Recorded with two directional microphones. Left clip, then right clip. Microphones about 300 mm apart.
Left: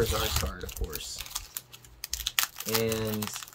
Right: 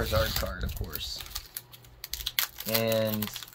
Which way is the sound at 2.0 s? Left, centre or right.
Centre.